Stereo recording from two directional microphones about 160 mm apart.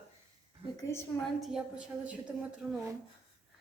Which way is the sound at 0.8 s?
15° left (ahead or behind).